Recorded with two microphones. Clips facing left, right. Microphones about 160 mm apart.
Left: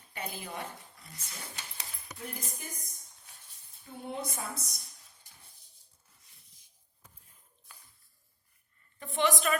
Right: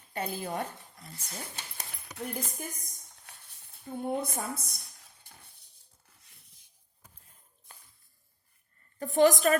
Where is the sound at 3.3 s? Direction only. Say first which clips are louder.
Right 6 dB; 60° right (ahead or behind).